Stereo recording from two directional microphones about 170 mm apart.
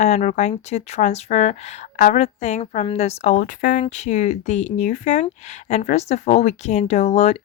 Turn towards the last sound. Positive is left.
turn(degrees=40)  # may be behind; listen again after turning